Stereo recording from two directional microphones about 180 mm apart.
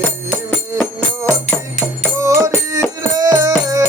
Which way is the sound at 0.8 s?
10° left (ahead or behind).